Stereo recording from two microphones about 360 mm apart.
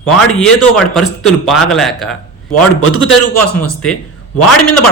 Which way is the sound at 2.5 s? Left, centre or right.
Left.